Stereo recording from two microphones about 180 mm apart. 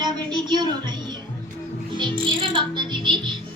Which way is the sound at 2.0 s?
25° right (ahead or behind).